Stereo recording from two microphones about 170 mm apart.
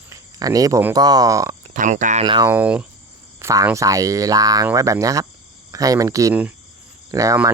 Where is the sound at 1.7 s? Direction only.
50° right (ahead or behind).